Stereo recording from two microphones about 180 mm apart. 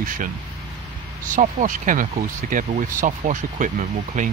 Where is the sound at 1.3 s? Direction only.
45° right (ahead or behind).